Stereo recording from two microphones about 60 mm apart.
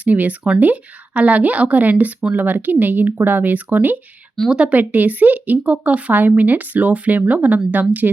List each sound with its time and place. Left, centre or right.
0.0 s speech: right
4.8 s speech: right